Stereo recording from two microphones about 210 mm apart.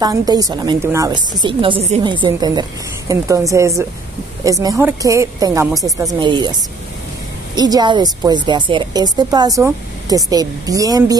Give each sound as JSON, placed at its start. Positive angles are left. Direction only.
{"t": 0.0, "sound": "a woman's voice", "side_deg": -20}